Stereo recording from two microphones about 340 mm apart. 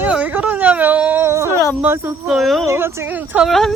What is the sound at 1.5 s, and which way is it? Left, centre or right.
Speech, centre.